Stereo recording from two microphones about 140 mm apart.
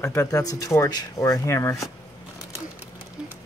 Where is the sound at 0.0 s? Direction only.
20° left (ahead or behind).